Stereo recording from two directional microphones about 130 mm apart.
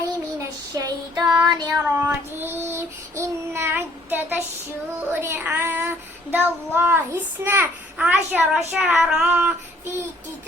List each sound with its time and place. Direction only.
0.3 s child singing: 30° right (ahead or behind)
2.0 s child singing: 15° right (ahead or behind)